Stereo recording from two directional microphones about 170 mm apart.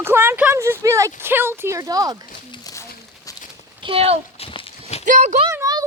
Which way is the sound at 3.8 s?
35° right (ahead or behind).